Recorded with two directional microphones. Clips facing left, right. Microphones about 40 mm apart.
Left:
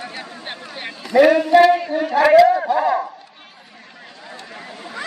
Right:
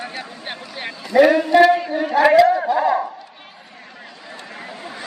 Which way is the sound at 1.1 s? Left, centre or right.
Centre.